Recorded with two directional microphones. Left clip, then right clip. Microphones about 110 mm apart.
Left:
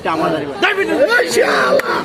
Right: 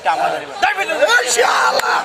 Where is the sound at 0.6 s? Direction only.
20° right (ahead or behind).